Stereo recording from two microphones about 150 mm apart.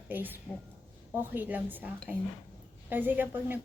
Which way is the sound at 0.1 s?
15° right (ahead or behind).